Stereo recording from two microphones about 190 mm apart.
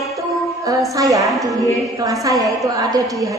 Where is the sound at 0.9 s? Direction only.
15° right (ahead or behind).